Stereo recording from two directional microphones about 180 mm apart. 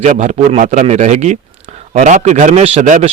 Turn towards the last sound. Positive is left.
turn(degrees=-40)  # may be behind; listen again after turning